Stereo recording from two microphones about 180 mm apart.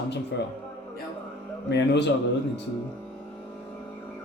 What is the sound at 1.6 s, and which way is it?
Speech, 75° left (ahead or behind).